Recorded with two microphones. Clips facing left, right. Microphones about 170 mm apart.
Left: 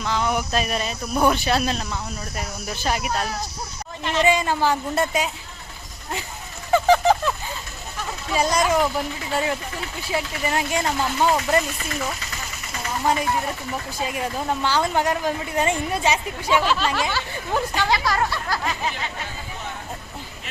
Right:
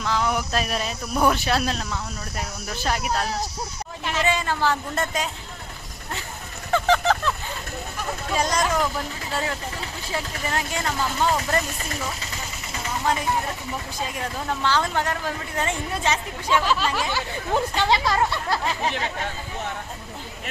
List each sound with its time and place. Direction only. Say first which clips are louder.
0.0 s speech: left 1 dB; centre (ahead or behind)
4.2 s speech: left 4 dB; 15° left (ahead or behind)
6.7 s a sound: left 4 dB; 10° left (ahead or behind)
8.4 s speech: left 4 dB; 10° left (ahead or behind)
14.0 s speech: left 4 dB; 10° left (ahead or behind)
17.1 s speech: right 1 dB; 20° right (ahead or behind)